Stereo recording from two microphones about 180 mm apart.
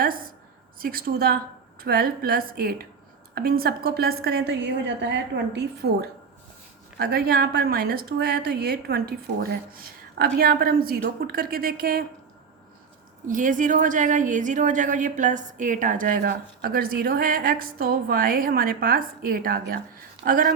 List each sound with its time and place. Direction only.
0.8 s a woman's voice: 55° right (ahead or behind)
13.2 s speech: 45° right (ahead or behind)